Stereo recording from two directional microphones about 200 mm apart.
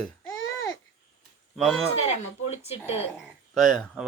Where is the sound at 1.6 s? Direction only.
Centre (ahead or behind).